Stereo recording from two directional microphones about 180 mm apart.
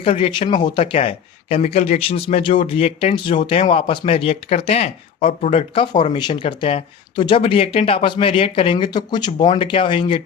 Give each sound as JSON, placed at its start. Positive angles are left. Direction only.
{"t": 0.0, "sound": "speech", "side_deg": 30}